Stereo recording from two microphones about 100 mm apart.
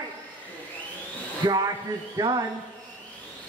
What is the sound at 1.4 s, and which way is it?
Speech, 40° right (ahead or behind).